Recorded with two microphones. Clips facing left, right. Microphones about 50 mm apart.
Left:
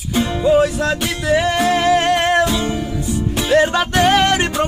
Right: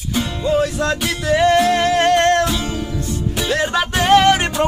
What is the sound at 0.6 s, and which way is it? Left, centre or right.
Music, centre.